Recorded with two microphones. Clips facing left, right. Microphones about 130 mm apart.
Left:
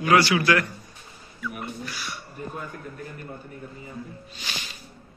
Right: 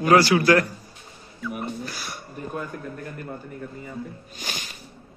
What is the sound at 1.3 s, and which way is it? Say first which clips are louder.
Speech: right 3 dB; 30° right (ahead or behind).